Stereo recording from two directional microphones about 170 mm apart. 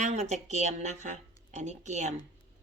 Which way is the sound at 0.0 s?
40° right (ahead or behind).